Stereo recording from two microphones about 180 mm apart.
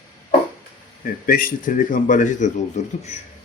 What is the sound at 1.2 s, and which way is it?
Speech, 50° left (ahead or behind).